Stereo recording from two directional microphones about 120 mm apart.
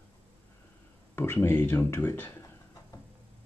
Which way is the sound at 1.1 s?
20° left (ahead or behind).